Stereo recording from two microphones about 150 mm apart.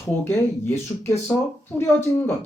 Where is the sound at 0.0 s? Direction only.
15° left (ahead or behind).